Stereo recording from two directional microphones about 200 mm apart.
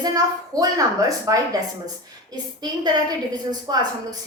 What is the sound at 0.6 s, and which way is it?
A woman's voice, 15° right (ahead or behind).